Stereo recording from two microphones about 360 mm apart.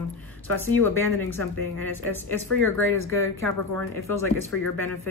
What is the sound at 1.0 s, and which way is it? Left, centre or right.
Speech, right.